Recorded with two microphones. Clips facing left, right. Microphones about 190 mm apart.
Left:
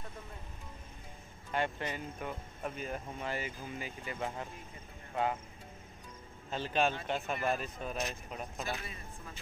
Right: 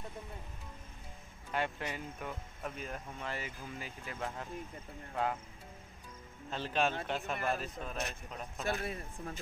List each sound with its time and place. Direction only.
1.5 s speech: centre (ahead or behind)
6.5 s speech: centre (ahead or behind)
8.6 s speech: 55° right (ahead or behind)